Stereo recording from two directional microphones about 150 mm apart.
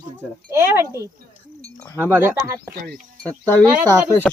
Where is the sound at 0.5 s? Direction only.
15° right (ahead or behind).